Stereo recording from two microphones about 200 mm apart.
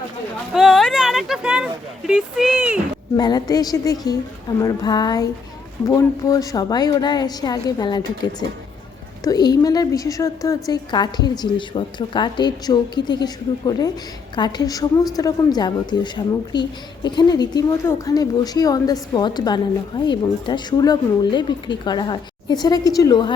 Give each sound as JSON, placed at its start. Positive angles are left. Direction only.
{"t": 0.5, "sound": "speech", "side_deg": 0}
{"t": 3.2, "sound": "a woman's voice", "side_deg": 20}